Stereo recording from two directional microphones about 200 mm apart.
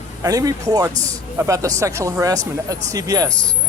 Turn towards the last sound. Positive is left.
turn(degrees=-20)  # may be behind; listen again after turning